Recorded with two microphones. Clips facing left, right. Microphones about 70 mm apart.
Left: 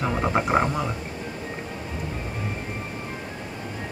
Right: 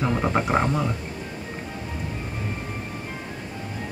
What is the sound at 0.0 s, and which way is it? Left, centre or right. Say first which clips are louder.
Speech: even; centre.